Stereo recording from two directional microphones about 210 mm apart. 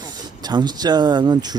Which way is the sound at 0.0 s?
20° right (ahead or behind).